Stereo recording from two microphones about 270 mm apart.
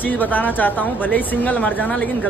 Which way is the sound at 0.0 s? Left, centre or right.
Centre.